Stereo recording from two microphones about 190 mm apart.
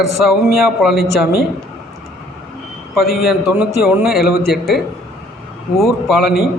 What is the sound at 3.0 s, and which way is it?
Speech, 55° left (ahead or behind).